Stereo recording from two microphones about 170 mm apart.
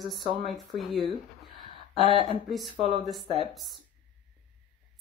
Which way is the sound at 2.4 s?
Centre (ahead or behind).